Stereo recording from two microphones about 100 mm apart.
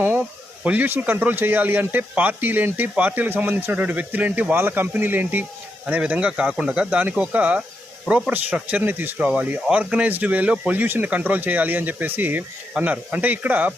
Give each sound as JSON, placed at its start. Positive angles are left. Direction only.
{"t": 0.6, "sound": "speech", "side_deg": -15}